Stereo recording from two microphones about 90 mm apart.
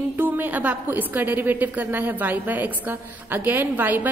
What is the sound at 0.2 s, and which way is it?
A woman's voice, 20° right (ahead or behind).